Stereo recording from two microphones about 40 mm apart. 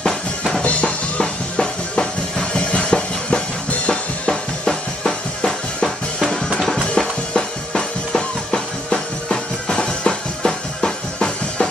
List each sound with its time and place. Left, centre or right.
0.6 s music: left; by 5.9 s centre
7.0 s music: centre